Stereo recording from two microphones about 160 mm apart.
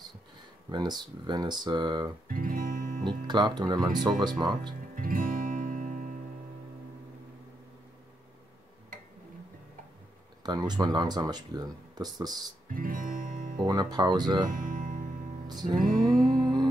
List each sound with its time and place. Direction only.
0.7 s speech: 25° right (ahead or behind)
2.2 s music: 60° right (ahead or behind)
3.1 s speech: 30° right (ahead or behind)
4.9 s music: 60° right (ahead or behind)
10.4 s speech: 25° right (ahead or behind)
12.6 s music: 60° right (ahead or behind)
13.7 s speech: 25° right (ahead or behind)
14.5 s music: 55° right (ahead or behind)
15.4 s music: 25° right (ahead or behind)
15.8 s music: 60° right (ahead or behind)